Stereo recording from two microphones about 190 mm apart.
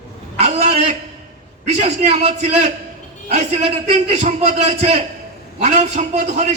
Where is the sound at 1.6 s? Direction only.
35° right (ahead or behind).